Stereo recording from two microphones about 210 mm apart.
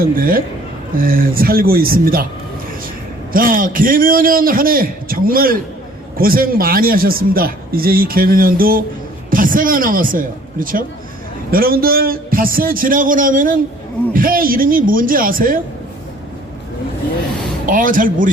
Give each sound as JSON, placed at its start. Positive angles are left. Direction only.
{"t": 0.0, "sound": "a man's voice", "side_deg": -45}
{"t": 3.3, "sound": "a man's voice", "side_deg": -40}
{"t": 17.7, "sound": "speech", "side_deg": -40}